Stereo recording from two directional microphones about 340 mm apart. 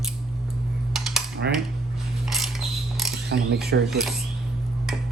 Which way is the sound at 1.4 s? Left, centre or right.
Right.